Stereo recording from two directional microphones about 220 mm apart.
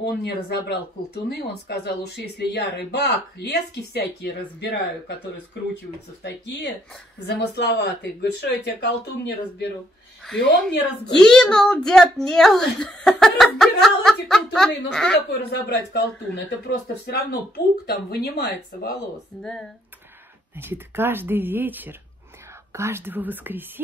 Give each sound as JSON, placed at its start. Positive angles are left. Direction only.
{"t": 0.0, "sound": "speech", "side_deg": 45}
{"t": 11.1, "sound": "a child's voice", "side_deg": 5}
{"t": 15.3, "sound": "speech", "side_deg": 50}
{"t": 19.3, "sound": "a child's voice", "side_deg": 0}
{"t": 20.5, "sound": "speech", "side_deg": -10}